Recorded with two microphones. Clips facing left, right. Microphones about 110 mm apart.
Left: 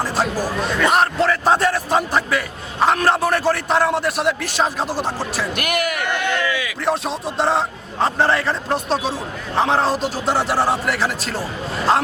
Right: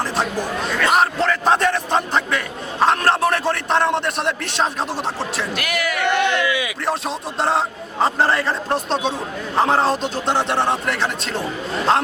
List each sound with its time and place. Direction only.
0.0 s chatter: centre (ahead or behind)
0.6 s a man's voice: centre (ahead or behind)
5.5 s speech: 55° left (ahead or behind)
6.1 s speech: 20° right (ahead or behind)
6.8 s a man's voice: centre (ahead or behind)